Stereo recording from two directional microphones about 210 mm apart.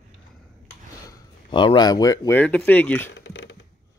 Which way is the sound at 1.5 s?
20° left (ahead or behind).